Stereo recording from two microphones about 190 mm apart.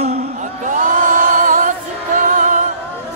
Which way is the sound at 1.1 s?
45° right (ahead or behind).